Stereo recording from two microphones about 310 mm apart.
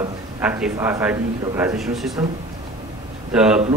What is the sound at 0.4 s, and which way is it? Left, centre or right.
A man's voice, centre.